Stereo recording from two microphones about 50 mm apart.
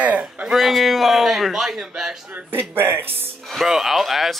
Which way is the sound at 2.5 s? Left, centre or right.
Right.